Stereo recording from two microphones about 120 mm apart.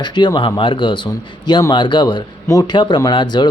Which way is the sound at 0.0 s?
40° left (ahead or behind).